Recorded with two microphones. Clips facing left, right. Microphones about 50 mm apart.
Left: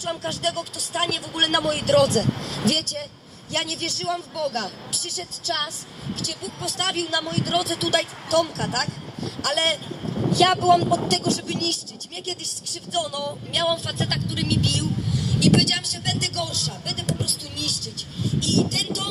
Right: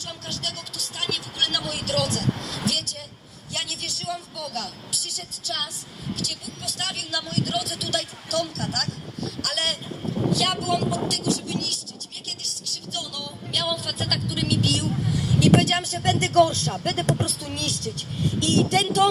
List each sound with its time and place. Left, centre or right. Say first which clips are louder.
0.0 s a woman's voice: left 7 dB; centre; by 11.8 s left
12.7 s music: left 8 dB; centre
13.7 s speech: left 1 dB; centre; by 19.0 s right